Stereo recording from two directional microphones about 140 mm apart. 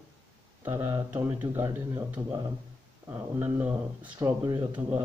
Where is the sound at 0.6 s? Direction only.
20° right (ahead or behind).